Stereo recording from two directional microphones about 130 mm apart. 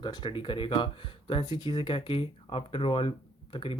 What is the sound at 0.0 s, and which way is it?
Speech, 35° left (ahead or behind).